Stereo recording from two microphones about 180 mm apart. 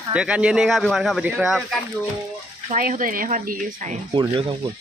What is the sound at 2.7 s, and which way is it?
Speech, 50° right (ahead or behind).